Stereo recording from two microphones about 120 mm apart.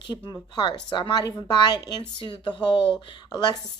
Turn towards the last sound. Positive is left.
turn(degrees=35)  # may be behind; listen again after turning